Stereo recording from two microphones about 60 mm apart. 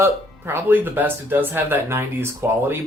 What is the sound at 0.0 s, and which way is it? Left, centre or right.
Speech, right.